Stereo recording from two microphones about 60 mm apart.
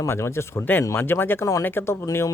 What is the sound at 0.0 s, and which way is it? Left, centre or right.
Speech, left.